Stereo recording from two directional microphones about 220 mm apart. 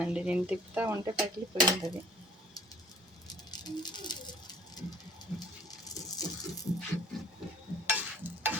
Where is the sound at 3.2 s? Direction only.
20° left (ahead or behind).